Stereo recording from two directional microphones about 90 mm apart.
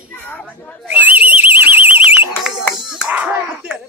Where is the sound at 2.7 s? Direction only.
5° right (ahead or behind).